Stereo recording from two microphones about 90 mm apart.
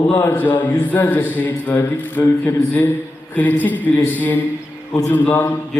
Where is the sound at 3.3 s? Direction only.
20° left (ahead or behind).